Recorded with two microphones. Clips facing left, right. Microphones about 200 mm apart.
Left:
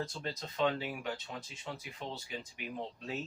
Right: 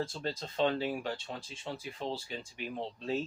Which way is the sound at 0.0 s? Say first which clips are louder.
Right 3 dB; 30° right (ahead or behind).